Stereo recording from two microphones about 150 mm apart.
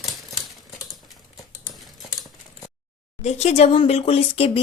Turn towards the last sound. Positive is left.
turn(degrees=40)  # may be behind; listen again after turning